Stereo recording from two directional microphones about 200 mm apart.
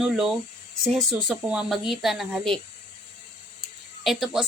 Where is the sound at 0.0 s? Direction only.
Centre (ahead or behind).